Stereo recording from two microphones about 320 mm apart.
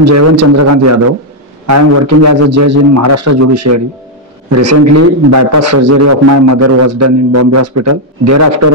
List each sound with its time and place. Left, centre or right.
0.0 s a man's voice: right